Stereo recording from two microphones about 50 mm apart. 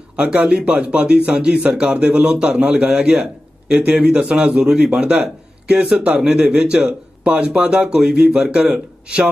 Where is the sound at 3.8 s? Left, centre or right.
Right.